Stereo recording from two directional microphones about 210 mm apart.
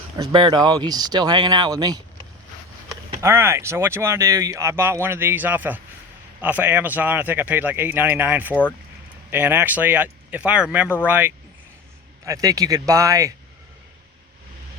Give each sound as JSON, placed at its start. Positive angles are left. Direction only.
{"t": 0.2, "sound": "speech", "side_deg": -20}
{"t": 3.2, "sound": "speech", "side_deg": -10}